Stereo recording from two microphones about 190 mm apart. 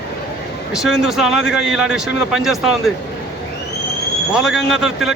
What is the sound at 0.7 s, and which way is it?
A man's voice, centre (ahead or behind).